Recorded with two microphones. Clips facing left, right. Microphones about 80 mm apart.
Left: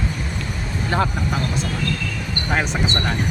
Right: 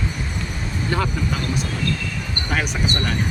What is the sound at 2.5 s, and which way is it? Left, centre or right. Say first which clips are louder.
Speech: left 1 dB; left.